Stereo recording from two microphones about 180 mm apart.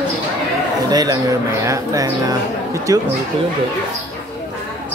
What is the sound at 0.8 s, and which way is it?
A man's voice, 20° right (ahead or behind).